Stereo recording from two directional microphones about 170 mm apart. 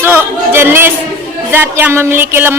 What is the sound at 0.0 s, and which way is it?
Chatter, 10° right (ahead or behind).